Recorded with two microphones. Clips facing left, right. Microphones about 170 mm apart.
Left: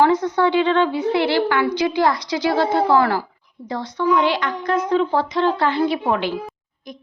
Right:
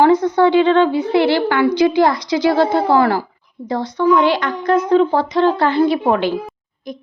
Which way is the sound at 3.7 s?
35° right (ahead or behind).